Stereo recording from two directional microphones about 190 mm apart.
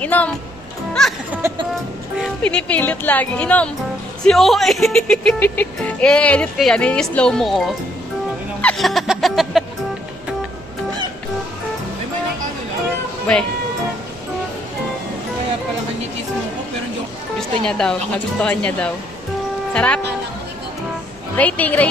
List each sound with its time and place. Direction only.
0.0 s speech: 10° left (ahead or behind)
2.2 s speech: 5° left (ahead or behind)
8.5 s a sound: 5° left (ahead or behind)
17.4 s speech: 5° left (ahead or behind)
21.4 s speech: 10° left (ahead or behind)